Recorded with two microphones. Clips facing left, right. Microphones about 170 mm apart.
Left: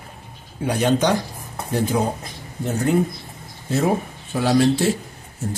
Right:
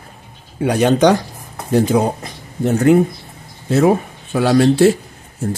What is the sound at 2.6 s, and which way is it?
Speech, 70° right (ahead or behind).